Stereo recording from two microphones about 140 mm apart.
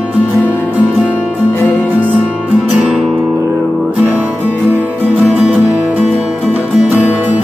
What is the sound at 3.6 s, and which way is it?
Music, 15° right (ahead or behind).